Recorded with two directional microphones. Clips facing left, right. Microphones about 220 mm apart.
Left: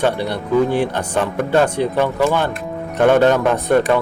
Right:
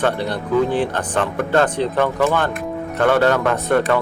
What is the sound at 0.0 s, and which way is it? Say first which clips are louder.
Speech: left 1 dB; 10° left (ahead or behind).